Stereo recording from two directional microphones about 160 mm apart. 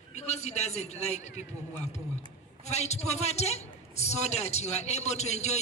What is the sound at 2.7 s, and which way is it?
A woman's voice, 45° left (ahead or behind).